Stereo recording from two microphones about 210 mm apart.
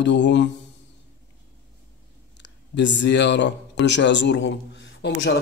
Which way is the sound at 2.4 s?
55° left (ahead or behind).